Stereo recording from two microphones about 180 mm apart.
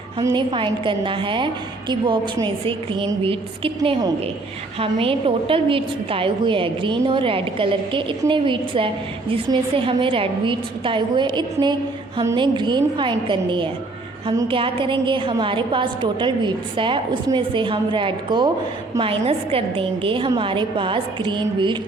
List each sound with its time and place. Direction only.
0.2 s a woman's voice: 20° right (ahead or behind)